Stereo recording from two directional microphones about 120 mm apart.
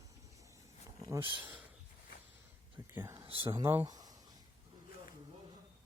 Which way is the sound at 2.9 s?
25° right (ahead or behind).